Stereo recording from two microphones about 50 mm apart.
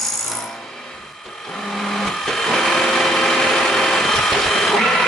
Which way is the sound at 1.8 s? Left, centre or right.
Centre.